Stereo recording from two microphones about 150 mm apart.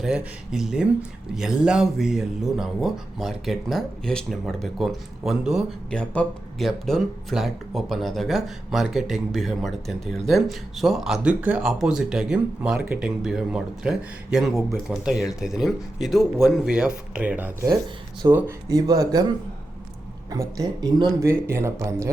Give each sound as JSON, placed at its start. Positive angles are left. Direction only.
{"t": 0.0, "sound": "speech", "side_deg": -5}
{"t": 18.7, "sound": "speech", "side_deg": -25}
{"t": 20.3, "sound": "speech", "side_deg": -25}